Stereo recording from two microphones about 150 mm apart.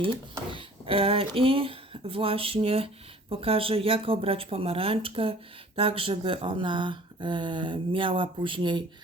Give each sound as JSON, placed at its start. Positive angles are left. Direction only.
{"t": 0.5, "sound": "speech", "side_deg": -35}